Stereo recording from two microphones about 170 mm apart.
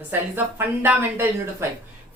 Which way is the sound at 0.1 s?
10° right (ahead or behind).